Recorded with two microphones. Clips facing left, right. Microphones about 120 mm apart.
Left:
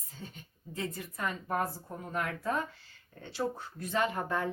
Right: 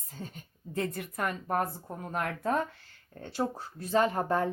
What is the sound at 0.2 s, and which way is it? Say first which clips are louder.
A woman's voice: right 4 dB; 45° right (ahead or behind).